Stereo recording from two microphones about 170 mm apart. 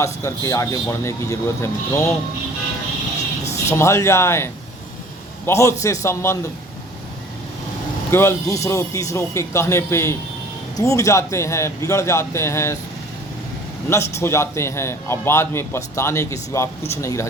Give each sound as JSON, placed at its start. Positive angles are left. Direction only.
{"t": 0.0, "sound": "a man's voice", "side_deg": 15}
{"t": 3.5, "sound": "speech", "side_deg": 15}
{"t": 5.5, "sound": "a man's voice", "side_deg": 15}
{"t": 8.1, "sound": "a man's voice", "side_deg": 15}
{"t": 13.9, "sound": "a man's voice", "side_deg": 15}